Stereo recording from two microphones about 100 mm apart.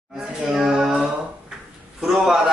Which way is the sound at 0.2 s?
5° right (ahead or behind).